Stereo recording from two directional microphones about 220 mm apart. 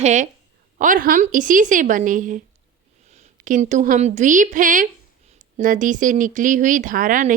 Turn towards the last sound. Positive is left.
turn(degrees=-40)  # may be behind; listen again after turning